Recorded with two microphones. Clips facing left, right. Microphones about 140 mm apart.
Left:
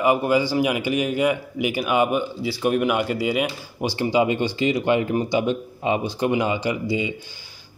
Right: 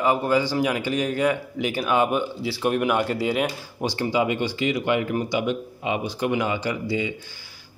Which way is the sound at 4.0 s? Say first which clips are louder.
Left 3 dB; 20° left (ahead or behind).